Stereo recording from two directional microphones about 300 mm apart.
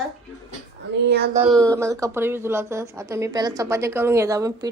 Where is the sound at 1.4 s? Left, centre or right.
Centre.